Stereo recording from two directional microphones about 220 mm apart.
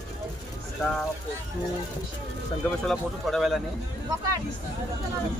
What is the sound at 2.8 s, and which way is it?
Speech, centre (ahead or behind).